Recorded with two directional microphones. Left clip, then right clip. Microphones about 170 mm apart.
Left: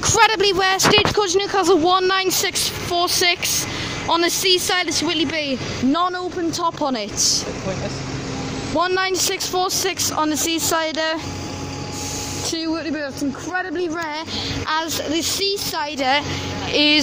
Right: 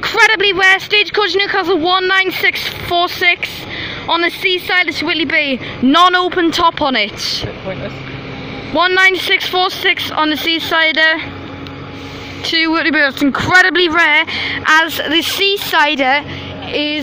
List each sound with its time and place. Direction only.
0.0 s speech: 10° left (ahead or behind); by 6.1 s 10° right (ahead or behind)
6.1 s speech: 40° right (ahead or behind)
6.6 s speech: 5° left (ahead or behind)
8.7 s speech: 5° left (ahead or behind)
12.9 s speech: 35° right (ahead or behind)
13.9 s speech: 5° right (ahead or behind)
16.7 s speech: 10° left (ahead or behind)